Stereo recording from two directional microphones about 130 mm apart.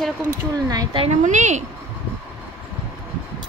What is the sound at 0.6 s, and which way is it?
Speech, 30° right (ahead or behind).